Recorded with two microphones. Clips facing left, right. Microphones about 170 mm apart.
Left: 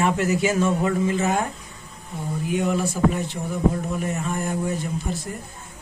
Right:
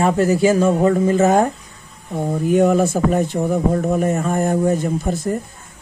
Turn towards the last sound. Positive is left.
turn(degrees=-45)  # may be behind; listen again after turning